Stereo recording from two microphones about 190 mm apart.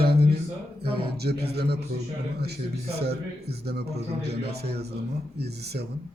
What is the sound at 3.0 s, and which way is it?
A man's voice, 55° right (ahead or behind).